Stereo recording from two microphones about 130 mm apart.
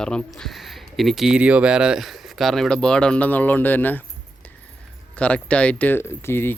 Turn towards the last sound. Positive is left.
turn(degrees=20)  # may be behind; listen again after turning